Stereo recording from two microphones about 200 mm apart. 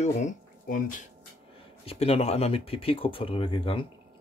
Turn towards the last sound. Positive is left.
turn(degrees=25)  # may be behind; listen again after turning